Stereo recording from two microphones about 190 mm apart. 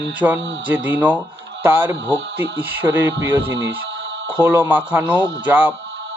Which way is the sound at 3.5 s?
80° right.